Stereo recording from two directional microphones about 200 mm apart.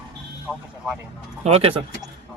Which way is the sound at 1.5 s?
30° right (ahead or behind).